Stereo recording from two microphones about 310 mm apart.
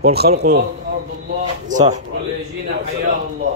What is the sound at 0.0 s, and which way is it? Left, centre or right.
Speech, right.